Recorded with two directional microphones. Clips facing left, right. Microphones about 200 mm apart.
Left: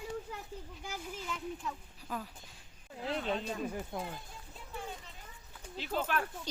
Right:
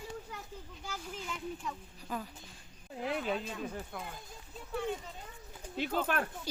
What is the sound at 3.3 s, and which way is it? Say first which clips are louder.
Speech: left 1 dB; 35° left (ahead or behind).